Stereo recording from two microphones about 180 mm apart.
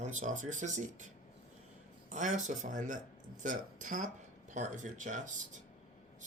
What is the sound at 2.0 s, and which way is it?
Speech, 45° right (ahead or behind).